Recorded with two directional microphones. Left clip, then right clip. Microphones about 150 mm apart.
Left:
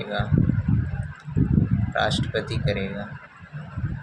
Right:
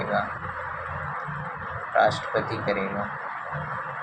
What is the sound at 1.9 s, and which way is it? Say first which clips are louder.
Speech: right 3 dB; 40° left (ahead or behind).